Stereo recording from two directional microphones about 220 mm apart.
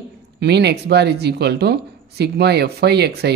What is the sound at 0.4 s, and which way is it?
Speech, 50° right (ahead or behind).